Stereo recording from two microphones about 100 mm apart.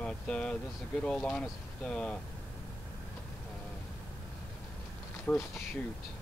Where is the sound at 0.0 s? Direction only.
10° left (ahead or behind).